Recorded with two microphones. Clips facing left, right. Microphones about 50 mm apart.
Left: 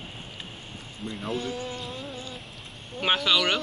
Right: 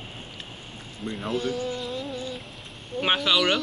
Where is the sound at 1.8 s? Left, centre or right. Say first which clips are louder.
Right 5 dB; right.